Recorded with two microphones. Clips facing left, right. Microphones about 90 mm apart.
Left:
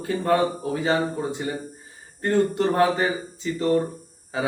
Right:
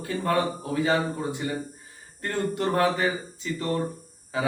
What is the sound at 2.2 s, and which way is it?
Speech, 25° left (ahead or behind).